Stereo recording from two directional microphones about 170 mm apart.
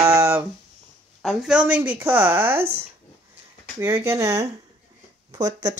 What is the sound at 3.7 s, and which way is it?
Speech, 15° right (ahead or behind).